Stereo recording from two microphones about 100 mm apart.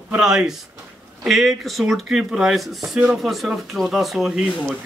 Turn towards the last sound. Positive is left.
turn(degrees=-5)  # may be behind; listen again after turning